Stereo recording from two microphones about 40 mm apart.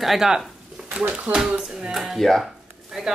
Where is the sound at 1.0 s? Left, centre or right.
Right.